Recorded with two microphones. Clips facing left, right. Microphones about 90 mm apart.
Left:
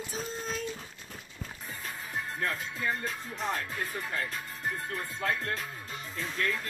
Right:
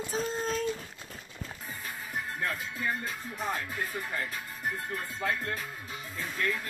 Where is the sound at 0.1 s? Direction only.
45° right (ahead or behind).